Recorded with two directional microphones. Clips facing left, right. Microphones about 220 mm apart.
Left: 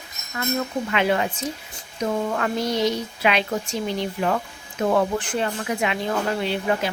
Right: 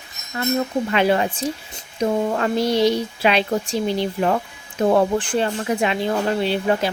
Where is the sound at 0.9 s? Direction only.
35° right (ahead or behind).